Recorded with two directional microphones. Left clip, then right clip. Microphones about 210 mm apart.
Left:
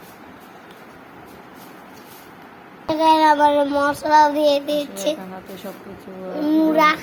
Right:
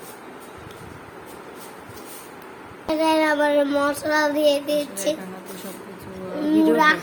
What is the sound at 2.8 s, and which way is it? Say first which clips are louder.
Child singing: left 5 dB; 15° left (ahead or behind).